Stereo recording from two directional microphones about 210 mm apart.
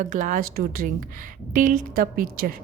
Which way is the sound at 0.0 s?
35° right (ahead or behind).